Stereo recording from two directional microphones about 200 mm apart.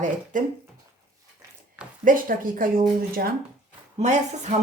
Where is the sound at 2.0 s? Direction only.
45° right (ahead or behind).